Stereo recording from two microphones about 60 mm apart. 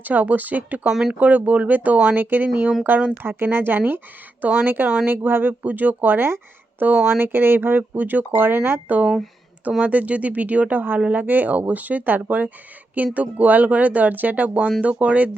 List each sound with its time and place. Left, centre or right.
0.0 s speech: right
0.9 s speech: centre
1.2 s speech: right